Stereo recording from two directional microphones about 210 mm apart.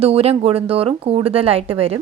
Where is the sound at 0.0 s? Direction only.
30° right (ahead or behind).